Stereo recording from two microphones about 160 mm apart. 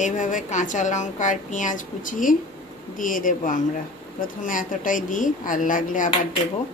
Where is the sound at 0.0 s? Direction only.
55° left (ahead or behind).